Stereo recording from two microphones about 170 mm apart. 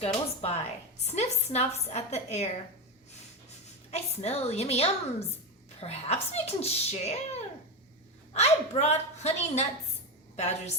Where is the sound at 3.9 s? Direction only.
40° left (ahead or behind).